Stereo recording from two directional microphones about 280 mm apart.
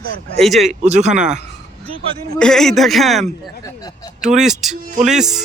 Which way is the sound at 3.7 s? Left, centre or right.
Centre.